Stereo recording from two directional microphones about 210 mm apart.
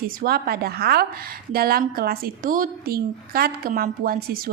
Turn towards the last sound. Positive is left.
turn(degrees=-45)  # may be behind; listen again after turning